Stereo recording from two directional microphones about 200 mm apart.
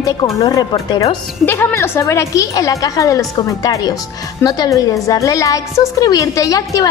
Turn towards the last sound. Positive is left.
turn(degrees=15)  # may be behind; listen again after turning